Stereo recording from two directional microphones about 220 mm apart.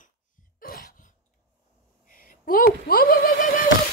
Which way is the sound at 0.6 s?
40° left (ahead or behind).